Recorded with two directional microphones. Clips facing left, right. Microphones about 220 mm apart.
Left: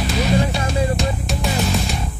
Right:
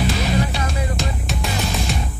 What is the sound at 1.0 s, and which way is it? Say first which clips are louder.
Music: left 3 dB; centre (ahead or behind).